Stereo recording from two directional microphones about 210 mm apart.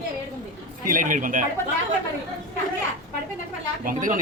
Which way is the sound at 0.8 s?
40° right (ahead or behind).